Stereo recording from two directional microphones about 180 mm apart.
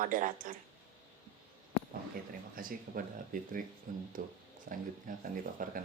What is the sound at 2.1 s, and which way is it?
Speech, 50° right (ahead or behind).